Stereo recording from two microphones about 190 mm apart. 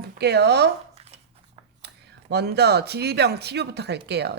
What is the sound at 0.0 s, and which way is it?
Speech, 55° right (ahead or behind).